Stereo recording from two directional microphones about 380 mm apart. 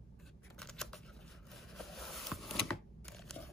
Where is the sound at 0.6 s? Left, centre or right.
Centre.